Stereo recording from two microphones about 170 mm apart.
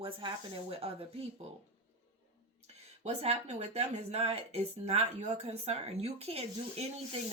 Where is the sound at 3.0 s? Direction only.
40° right (ahead or behind).